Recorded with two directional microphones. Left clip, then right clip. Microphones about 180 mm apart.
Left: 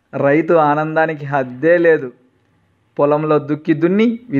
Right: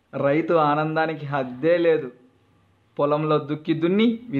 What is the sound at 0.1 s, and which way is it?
Speech, 35° left (ahead or behind).